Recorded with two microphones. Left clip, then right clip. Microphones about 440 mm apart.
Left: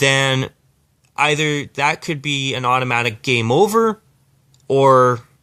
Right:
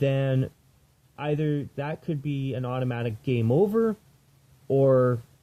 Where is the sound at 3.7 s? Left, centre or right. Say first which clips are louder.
Left 9 dB; centre.